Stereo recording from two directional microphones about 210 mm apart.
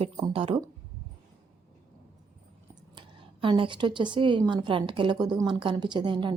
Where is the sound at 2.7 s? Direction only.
20° right (ahead or behind).